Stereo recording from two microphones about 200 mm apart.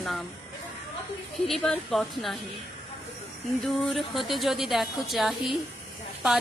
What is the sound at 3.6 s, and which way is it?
A woman's voice, centre (ahead or behind).